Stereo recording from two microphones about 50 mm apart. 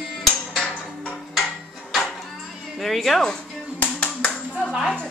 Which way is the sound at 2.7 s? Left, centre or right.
Centre.